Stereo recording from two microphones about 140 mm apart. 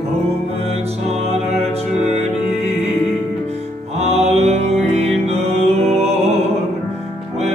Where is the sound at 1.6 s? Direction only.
50° right (ahead or behind).